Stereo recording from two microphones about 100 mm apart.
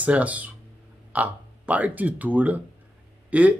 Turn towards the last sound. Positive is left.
turn(degrees=-15)  # may be behind; listen again after turning